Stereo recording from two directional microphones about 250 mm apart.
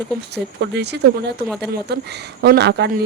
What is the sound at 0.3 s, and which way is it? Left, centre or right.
A woman's voice, right.